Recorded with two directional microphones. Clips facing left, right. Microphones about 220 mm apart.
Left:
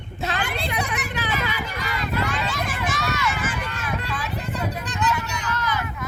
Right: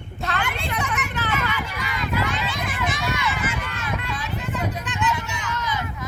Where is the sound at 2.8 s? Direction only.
45° left (ahead or behind).